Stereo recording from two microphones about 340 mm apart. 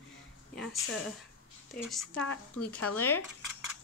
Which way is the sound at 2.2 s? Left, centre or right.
Left.